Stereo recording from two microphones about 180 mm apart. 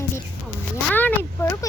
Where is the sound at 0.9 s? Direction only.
10° left (ahead or behind).